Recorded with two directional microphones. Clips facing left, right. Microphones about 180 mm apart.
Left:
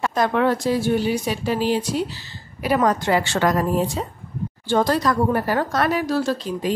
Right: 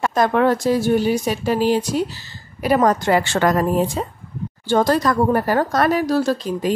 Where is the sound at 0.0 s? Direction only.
45° right (ahead or behind).